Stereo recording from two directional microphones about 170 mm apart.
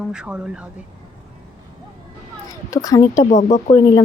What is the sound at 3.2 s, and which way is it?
Speech, 45° left (ahead or behind).